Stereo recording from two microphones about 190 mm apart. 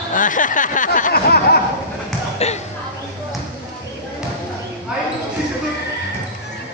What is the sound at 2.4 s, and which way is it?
Speech, 35° left (ahead or behind).